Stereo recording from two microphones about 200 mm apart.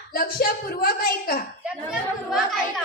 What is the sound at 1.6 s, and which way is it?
Chatter, 5° right (ahead or behind).